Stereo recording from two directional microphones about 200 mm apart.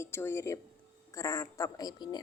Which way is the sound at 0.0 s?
10° left (ahead or behind).